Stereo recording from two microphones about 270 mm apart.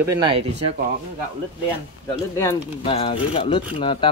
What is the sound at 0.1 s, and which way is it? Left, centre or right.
Speech, centre.